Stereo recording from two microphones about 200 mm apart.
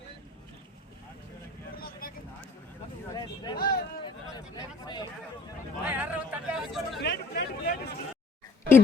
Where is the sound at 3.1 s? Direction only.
20° left (ahead or behind).